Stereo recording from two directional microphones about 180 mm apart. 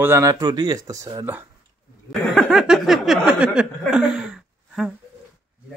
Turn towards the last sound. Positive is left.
turn(degrees=0)  # may be behind; listen again after turning